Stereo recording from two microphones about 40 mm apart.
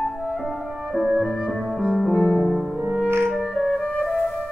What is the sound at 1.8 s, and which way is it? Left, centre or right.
Music, centre.